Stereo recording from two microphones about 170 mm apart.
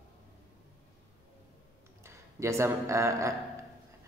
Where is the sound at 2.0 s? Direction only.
15° right (ahead or behind).